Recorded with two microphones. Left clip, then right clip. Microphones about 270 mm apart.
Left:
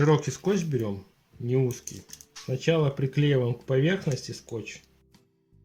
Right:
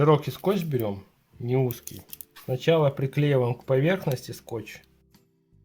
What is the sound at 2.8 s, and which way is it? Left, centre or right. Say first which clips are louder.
Speech: right 3 dB; centre.